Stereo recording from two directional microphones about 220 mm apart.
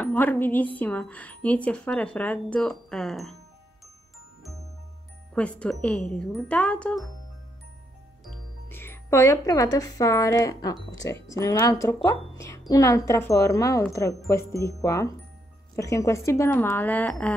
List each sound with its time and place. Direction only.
0.0 s speech: 10° left (ahead or behind)
5.3 s speech: 5° left (ahead or behind)
8.6 s speech: 10° left (ahead or behind)